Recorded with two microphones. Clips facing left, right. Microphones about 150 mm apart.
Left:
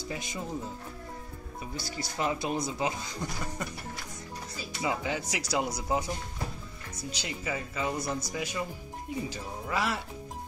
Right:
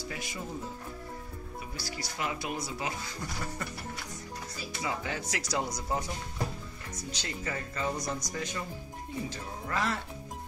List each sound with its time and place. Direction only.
0.1 s speech: 20° left (ahead or behind)
1.8 s speech: 30° left (ahead or behind)
4.8 s speech: 15° left (ahead or behind)